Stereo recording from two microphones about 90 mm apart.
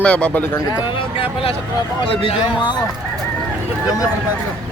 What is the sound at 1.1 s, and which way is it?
Speech, 90° left.